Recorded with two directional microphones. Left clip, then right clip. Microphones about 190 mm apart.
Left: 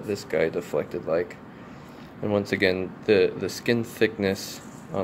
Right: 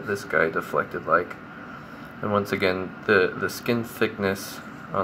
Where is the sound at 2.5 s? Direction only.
45° left (ahead or behind).